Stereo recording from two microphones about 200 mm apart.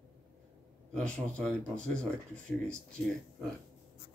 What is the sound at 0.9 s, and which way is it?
Speech, 5° left (ahead or behind).